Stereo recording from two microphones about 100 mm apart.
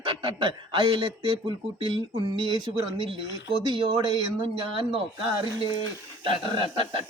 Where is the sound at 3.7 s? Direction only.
55° right (ahead or behind).